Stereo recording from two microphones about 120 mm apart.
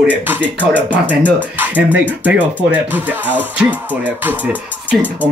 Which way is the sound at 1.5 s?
15° right (ahead or behind).